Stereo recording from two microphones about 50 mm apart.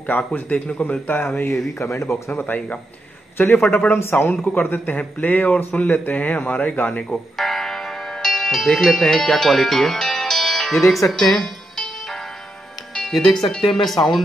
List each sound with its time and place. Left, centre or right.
0.3 s a man's voice: left
1.0 s a man's voice: left
1.8 s speech: left
3.3 s a man's voice: left
3.6 s a man's voice: left
3.9 s speech: left
4.5 s a man's voice: left
7.3 s music: centre
10.7 s speech: centre
11.1 s music: centre
12.9 s speech: centre